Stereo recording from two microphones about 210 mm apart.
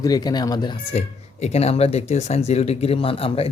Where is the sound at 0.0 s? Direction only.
20° left (ahead or behind).